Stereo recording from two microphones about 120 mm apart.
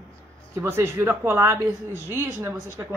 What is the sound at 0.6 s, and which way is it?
A woman's voice, 20° right (ahead or behind).